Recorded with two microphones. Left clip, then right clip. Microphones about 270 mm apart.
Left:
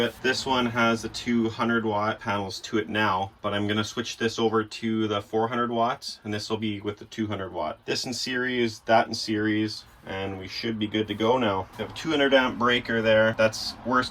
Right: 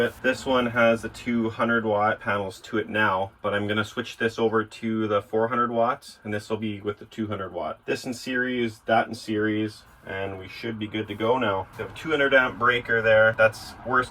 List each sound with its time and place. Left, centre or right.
0.0 s speech: centre